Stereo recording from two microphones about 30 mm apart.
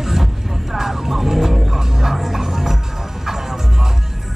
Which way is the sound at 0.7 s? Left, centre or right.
Centre.